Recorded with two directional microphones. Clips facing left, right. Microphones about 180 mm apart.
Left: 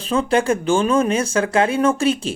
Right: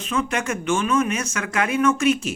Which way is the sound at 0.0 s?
30° left (ahead or behind).